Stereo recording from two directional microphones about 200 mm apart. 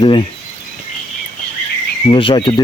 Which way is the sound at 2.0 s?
25° left (ahead or behind).